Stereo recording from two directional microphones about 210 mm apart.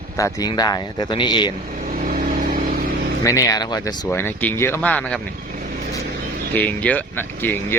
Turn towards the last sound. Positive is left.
turn(degrees=10)  # may be behind; listen again after turning